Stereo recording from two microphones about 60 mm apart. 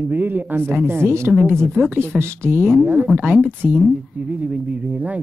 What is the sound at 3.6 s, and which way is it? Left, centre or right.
Speech, centre.